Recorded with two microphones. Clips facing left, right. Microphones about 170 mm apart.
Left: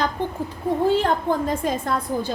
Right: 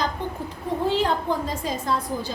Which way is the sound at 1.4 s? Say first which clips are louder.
Left 3 dB; 55° left (ahead or behind).